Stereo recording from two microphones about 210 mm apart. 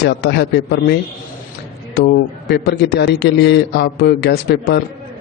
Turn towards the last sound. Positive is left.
turn(degrees=50)  # may be behind; listen again after turning